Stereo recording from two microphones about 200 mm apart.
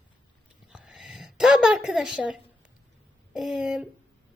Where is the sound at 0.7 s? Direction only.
5° right (ahead or behind).